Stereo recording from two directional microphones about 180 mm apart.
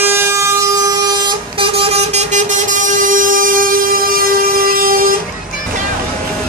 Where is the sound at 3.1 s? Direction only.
50° right (ahead or behind).